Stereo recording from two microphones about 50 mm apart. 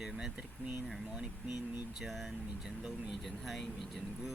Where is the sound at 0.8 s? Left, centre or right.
Centre.